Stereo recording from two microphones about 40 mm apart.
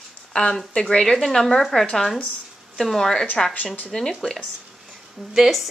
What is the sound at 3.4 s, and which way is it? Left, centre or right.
Speech, centre.